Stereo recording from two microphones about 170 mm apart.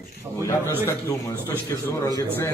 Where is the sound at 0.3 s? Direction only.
20° right (ahead or behind).